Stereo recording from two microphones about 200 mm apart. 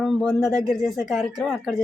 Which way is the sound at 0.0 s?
Centre (ahead or behind).